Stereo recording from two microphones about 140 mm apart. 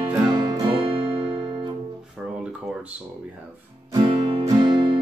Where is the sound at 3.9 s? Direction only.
35° right (ahead or behind).